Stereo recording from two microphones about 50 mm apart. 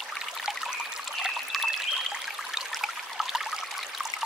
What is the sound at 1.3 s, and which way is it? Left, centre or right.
Trickle, centre.